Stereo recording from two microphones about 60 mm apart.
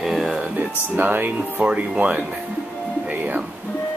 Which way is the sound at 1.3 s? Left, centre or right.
Centre.